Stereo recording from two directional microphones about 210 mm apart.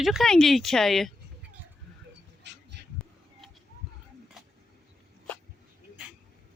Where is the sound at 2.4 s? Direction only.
55° right (ahead or behind).